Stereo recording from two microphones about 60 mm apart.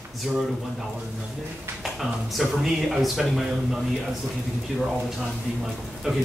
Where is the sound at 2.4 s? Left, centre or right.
Centre.